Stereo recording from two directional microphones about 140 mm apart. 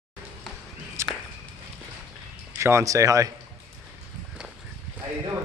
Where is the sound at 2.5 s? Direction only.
20° right (ahead or behind).